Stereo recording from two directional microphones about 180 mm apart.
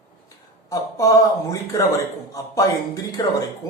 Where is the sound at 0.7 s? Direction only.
20° left (ahead or behind).